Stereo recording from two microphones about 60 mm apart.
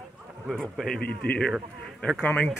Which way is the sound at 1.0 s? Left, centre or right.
Left.